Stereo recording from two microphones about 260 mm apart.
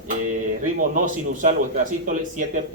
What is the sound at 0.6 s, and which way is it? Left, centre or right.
A man's voice, right.